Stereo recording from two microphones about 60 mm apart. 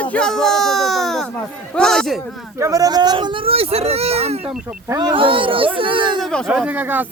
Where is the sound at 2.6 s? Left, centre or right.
Right.